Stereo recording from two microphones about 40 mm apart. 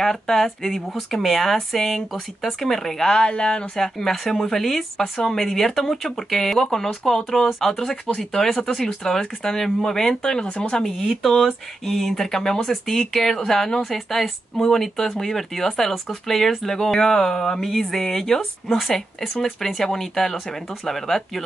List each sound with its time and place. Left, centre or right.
0.0 s speech: centre
3.3 s speech: left
3.8 s speech: centre
7.9 s speech: centre
11.8 s speech: centre